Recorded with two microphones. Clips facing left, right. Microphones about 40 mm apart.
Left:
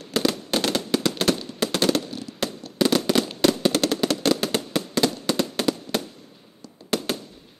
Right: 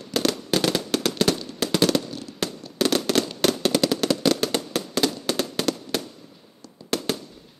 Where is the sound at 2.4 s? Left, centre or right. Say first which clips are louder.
Left 1 dB; centre.